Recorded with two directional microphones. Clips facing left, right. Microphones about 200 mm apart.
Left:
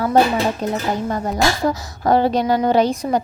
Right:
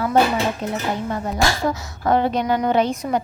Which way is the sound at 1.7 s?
35° left (ahead or behind).